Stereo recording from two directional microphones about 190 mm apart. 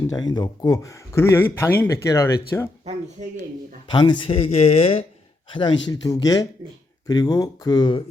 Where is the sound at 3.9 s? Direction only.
25° left (ahead or behind).